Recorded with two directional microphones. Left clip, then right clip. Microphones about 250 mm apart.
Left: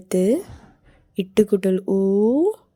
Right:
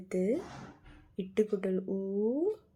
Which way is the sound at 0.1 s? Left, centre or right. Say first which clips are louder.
Left 12 dB; left.